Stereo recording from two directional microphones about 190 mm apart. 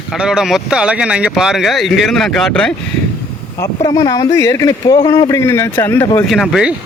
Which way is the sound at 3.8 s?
20° left (ahead or behind).